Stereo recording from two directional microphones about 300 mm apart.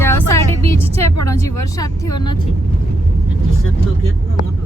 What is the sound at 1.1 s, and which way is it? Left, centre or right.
Speech, left.